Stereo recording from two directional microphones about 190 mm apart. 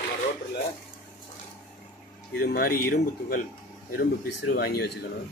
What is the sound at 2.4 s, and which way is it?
Speech, 50° left (ahead or behind).